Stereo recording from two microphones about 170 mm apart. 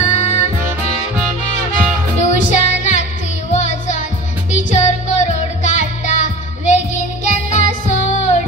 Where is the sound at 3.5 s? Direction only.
45° left (ahead or behind).